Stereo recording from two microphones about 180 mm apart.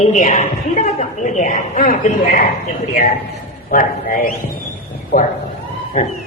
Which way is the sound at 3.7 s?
50° left (ahead or behind).